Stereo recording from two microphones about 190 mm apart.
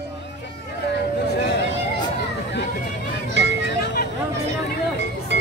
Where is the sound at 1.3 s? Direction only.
60° left (ahead or behind).